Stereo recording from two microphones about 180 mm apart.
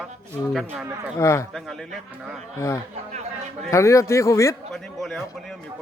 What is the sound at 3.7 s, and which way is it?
Speech, 15° left (ahead or behind).